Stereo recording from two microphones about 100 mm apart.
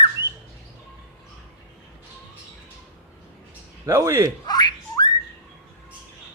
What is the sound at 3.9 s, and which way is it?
Speech, 30° right (ahead or behind).